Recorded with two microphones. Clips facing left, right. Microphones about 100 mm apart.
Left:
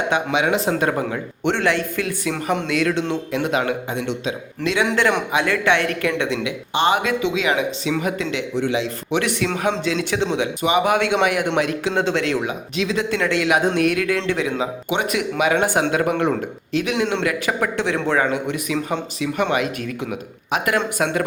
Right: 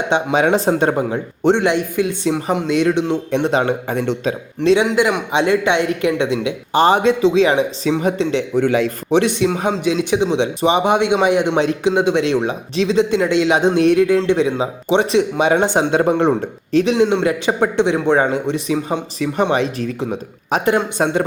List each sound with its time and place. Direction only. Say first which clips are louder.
0.1 s a man's voice: right 6 dB; 30° right (ahead or behind)
3.8 s a man's voice: right 5 dB; 45° right (ahead or behind); by 4.9 s 30° right (ahead or behind)
4.9 s a man's voice: right 2 dB; 10° right (ahead or behind)
5.3 s speech: right 3 dB; 25° right (ahead or behind)
6.7 s a man's voice: right 6 dB; 35° right (ahead or behind)
8.5 s a man's voice: right 6 dB; 50° right (ahead or behind)
9.0 s speech: right 7 dB; 25° right (ahead or behind)
10.4 s speech: right 3 dB; 30° right (ahead or behind)
12.5 s speech: right 5 dB; 30° right (ahead or behind)
20.0 s speech: right 4 dB; 30° right (ahead or behind)